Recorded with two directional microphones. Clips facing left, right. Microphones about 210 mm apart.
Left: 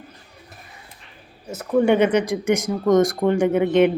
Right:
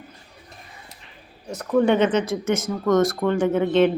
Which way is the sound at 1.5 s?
5° left (ahead or behind).